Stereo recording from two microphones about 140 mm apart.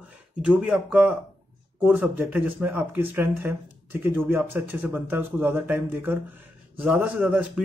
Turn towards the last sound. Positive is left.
turn(degrees=-10)  # may be behind; listen again after turning